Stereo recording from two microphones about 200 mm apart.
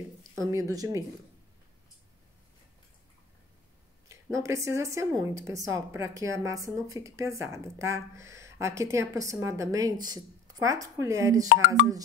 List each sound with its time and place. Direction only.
0.4 s speech: 15° right (ahead or behind)
4.1 s speech: 15° right (ahead or behind)